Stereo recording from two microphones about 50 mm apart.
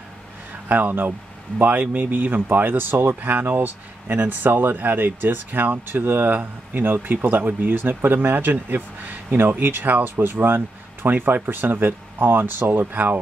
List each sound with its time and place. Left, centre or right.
0.7 s speech: right
3.2 s speech: right